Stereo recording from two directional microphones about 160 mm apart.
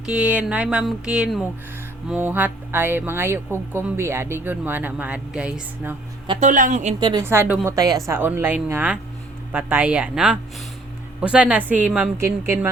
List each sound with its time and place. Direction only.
0.0 s speech: 5° right (ahead or behind)
6.4 s speech: 50° right (ahead or behind)
7.0 s a woman's voice: 25° right (ahead or behind)
7.3 s speech: 10° right (ahead or behind)